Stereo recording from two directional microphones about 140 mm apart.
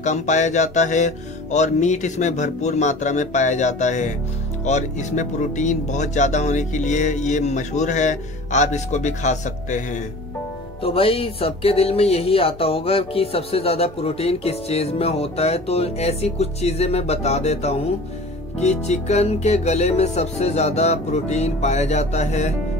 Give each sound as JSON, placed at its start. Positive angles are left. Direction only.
{"t": 0.0, "sound": "speech", "side_deg": 60}
{"t": 10.8, "sound": "speech", "side_deg": 40}